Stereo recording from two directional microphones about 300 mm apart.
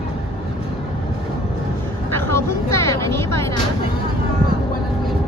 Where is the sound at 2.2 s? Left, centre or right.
Centre.